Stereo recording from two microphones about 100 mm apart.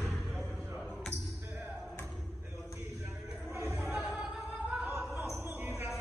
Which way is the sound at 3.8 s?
15° right (ahead or behind).